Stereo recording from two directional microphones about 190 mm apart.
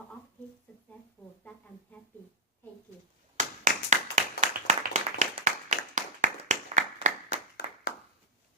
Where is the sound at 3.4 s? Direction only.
40° right (ahead or behind).